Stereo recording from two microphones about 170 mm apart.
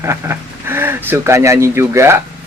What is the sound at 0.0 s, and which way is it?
Speech, 15° right (ahead or behind).